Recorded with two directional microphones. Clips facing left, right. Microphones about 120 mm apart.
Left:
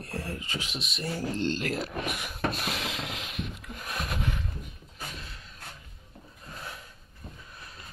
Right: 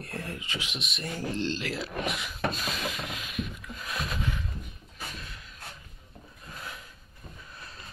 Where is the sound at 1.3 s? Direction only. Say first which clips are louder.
Left 2 dB; 50° left (ahead or behind).